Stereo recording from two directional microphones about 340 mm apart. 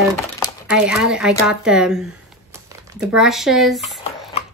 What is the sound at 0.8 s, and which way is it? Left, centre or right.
Speech, centre.